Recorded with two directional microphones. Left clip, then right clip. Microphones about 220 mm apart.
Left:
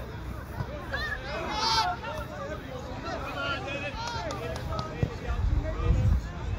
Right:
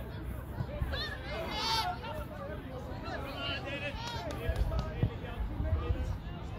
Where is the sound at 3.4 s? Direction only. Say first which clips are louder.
Left 4 dB; 15° right (ahead or behind).